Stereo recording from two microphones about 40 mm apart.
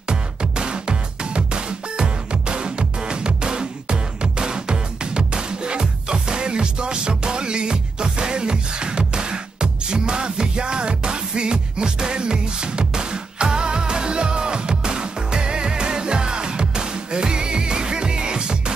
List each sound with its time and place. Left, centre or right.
0.1 s music: right